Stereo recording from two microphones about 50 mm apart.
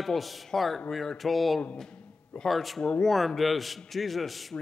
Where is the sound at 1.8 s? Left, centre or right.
Centre.